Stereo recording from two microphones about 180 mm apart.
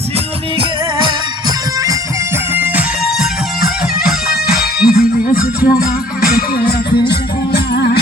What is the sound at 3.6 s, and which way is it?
Music, 55° left (ahead or behind).